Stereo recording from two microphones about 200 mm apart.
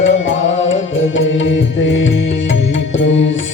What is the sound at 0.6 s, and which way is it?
Music, 70° left (ahead or behind).